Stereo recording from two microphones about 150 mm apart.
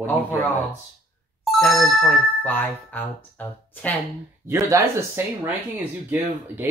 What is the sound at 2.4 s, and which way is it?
Speech, 10° left (ahead or behind).